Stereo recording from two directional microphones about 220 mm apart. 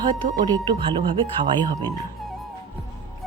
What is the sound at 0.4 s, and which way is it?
Speech, 20° right (ahead or behind).